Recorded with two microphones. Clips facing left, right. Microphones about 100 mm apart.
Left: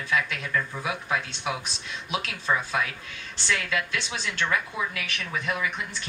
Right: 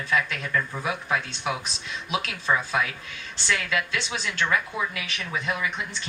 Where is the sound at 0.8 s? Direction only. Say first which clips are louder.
Right 1 dB; 25° right (ahead or behind).